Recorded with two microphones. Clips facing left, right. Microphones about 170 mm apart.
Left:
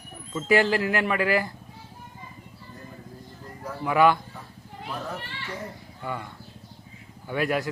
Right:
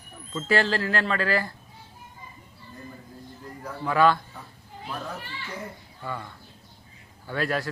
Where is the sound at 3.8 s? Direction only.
15° left (ahead or behind).